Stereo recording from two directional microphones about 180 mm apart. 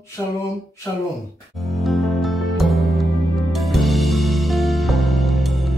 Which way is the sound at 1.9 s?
Centre (ahead or behind).